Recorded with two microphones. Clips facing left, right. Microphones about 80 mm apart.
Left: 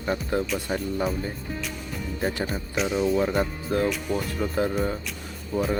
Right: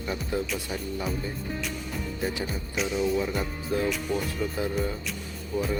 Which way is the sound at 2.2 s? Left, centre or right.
Left.